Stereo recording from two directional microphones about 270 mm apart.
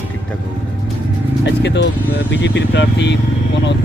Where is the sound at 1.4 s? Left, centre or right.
Left.